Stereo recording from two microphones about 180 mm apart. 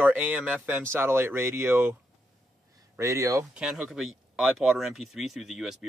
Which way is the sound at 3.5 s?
5° right (ahead or behind).